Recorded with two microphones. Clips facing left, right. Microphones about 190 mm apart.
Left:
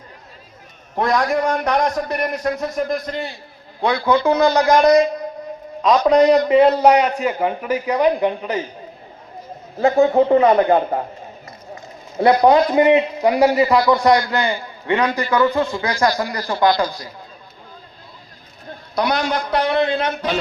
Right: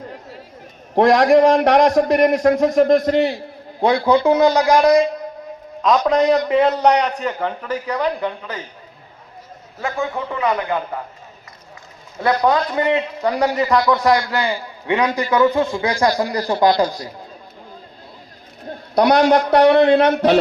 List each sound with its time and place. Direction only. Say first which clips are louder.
0.9 s a man's voice: right 7 dB; 90° right; by 3.4 s 75° right (ahead or behind)
4.0 s speech: right 1 dB; 20° right (ahead or behind)
6.1 s a man's voice: left 5 dB; centre (ahead or behind); by 8.6 s 20° left (ahead or behind)
9.7 s a man's voice: left 10 dB; 30° left (ahead or behind)
12.2 s a man's voice: left 4 dB; 20° left (ahead or behind); by 16.3 s 20° right (ahead or behind)
16.3 s speech: right 2 dB; 30° right (ahead or behind)
19.0 s a man's voice: right 8 dB; 65° right (ahead or behind)